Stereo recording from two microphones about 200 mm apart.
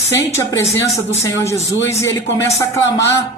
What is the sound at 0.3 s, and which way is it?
A man's voice, 15° left (ahead or behind).